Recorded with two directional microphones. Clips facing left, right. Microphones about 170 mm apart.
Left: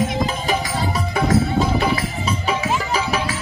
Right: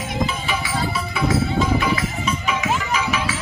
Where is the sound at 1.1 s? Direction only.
40° left (ahead or behind).